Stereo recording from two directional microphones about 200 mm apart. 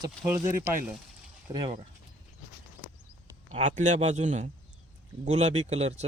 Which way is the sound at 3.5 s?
35° right (ahead or behind).